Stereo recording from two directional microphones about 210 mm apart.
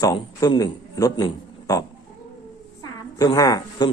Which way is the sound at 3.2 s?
15° left (ahead or behind).